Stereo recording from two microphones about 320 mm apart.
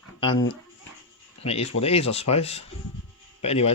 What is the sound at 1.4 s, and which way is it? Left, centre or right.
Speech, centre.